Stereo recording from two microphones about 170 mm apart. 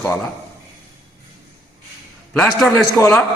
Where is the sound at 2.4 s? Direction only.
5° left (ahead or behind).